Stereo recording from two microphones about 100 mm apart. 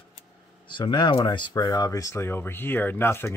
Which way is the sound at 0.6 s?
50° left (ahead or behind).